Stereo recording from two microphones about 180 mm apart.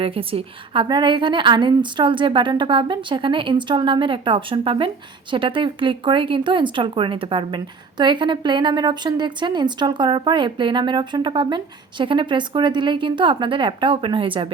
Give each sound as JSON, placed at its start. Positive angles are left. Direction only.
{"t": 0.0, "sound": "speech", "side_deg": -30}